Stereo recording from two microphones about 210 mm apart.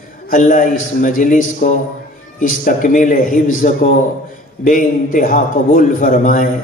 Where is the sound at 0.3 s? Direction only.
40° left (ahead or behind).